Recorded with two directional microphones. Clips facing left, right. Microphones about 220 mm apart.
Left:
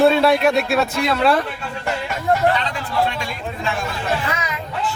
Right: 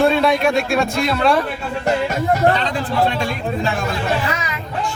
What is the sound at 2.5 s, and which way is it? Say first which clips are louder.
A man's voice: right 3 dB; 35° right (ahead or behind).